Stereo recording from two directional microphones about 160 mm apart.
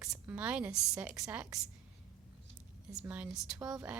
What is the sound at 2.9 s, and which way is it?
A woman's voice, 10° right (ahead or behind).